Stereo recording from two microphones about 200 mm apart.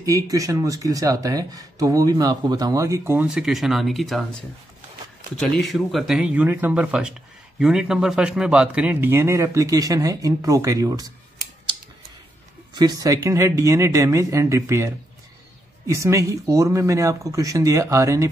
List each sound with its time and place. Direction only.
0.0 s speech: 15° right (ahead or behind)
12.7 s speech: 20° right (ahead or behind)